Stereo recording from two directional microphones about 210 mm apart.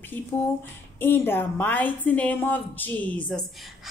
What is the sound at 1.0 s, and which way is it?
Speech, 10° left (ahead or behind).